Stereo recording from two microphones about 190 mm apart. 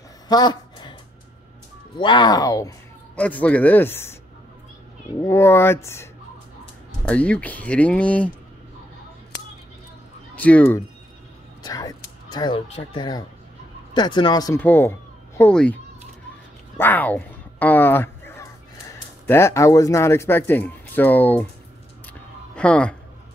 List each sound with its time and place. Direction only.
0.3 s a sound: 20° left (ahead or behind)
2.0 s speech: 25° left (ahead or behind)
3.2 s speech: 5° left (ahead or behind)
5.2 s speech: 15° left (ahead or behind)
7.1 s speech: 5° left (ahead or behind)
10.3 s speech: 10° left (ahead or behind)
11.6 s speech: 20° left (ahead or behind)
16.7 s a sound: 10° left (ahead or behind)
19.2 s speech: 15° left (ahead or behind)
22.6 s speech: 5° left (ahead or behind)